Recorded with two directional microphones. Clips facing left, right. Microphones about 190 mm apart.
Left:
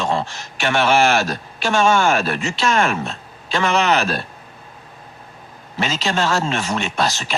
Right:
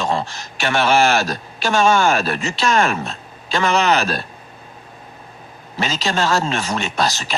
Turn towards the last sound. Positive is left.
turn(degrees=-40)  # may be behind; listen again after turning